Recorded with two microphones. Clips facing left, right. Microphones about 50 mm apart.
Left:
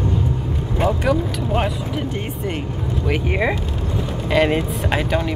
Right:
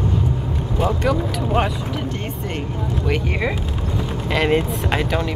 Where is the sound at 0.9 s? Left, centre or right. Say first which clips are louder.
Left 2 dB; centre.